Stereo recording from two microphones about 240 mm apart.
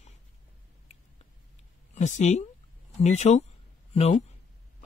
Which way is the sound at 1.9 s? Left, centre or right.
Left.